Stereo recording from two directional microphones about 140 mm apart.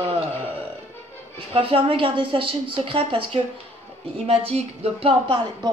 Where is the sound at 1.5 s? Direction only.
40° right (ahead or behind).